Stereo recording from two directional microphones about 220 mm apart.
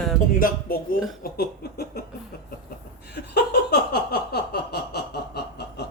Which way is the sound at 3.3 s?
45° left (ahead or behind).